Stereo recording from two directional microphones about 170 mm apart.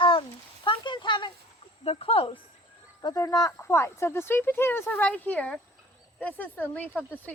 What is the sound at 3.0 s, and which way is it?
Speech, 20° left (ahead or behind).